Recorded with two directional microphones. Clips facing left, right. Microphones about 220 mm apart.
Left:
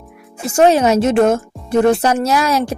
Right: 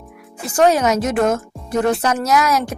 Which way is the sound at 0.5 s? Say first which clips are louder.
Left 3 dB; 25° left (ahead or behind).